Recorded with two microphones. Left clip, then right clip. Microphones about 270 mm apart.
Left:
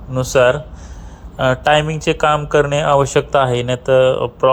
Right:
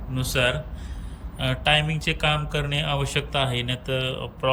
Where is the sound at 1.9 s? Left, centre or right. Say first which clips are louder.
Left 10 dB; centre.